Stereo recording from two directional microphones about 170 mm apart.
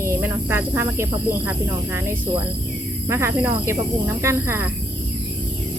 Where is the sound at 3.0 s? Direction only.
15° right (ahead or behind).